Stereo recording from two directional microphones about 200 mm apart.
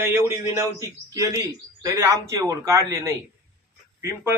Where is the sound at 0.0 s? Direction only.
10° right (ahead or behind).